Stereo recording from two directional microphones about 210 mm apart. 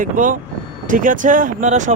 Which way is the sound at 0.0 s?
40° right (ahead or behind).